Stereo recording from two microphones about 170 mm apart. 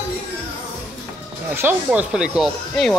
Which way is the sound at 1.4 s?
10° right (ahead or behind).